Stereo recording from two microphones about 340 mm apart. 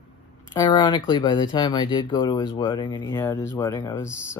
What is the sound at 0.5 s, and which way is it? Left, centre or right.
Speech, centre.